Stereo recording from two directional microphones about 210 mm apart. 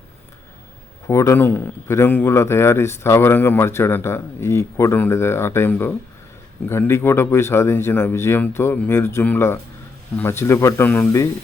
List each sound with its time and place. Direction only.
1.0 s a man's voice: 15° left (ahead or behind)